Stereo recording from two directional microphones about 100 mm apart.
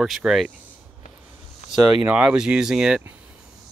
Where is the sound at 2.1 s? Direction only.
10° right (ahead or behind).